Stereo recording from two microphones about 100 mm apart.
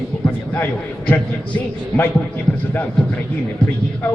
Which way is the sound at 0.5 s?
15° left (ahead or behind).